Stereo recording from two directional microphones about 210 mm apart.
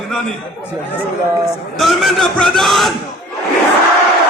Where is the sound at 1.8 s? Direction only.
Centre (ahead or behind).